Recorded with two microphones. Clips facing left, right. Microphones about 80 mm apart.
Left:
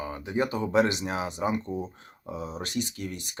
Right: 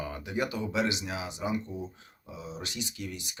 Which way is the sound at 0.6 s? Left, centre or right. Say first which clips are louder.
Left 6 dB; left.